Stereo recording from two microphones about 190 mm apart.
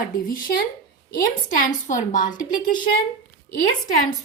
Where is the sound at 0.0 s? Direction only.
50° left (ahead or behind).